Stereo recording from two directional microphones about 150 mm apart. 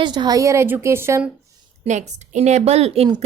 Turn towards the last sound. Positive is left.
turn(degrees=-40)  # may be behind; listen again after turning